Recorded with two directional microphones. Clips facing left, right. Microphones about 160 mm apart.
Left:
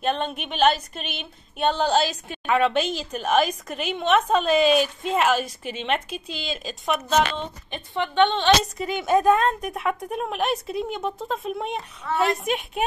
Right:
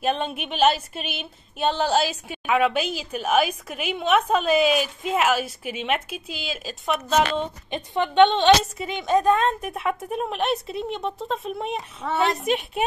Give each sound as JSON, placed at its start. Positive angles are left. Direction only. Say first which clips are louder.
{"t": 0.0, "sound": "speech", "louder": "even", "side_deg": -5}
{"t": 7.7, "sound": "a woman's voice", "louder": "right 3 dB", "side_deg": -20}
{"t": 8.7, "sound": "speech", "louder": "left 1 dB", "side_deg": 5}
{"t": 12.0, "sound": "a woman's voice", "louder": "right 1 dB", "side_deg": -70}
{"t": 12.4, "sound": "speech", "louder": "right 2 dB", "side_deg": 0}